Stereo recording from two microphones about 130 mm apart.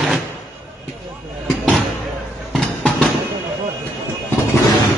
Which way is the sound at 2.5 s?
5° left (ahead or behind).